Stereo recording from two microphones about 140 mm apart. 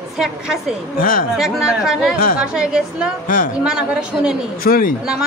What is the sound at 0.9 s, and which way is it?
Speech, 90° left.